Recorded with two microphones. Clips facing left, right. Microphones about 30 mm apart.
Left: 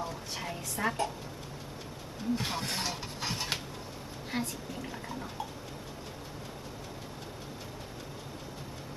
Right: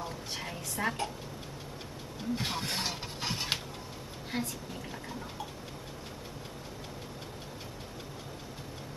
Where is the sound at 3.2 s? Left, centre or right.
Centre.